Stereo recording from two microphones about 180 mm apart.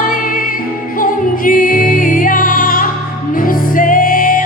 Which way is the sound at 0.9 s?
50° left (ahead or behind).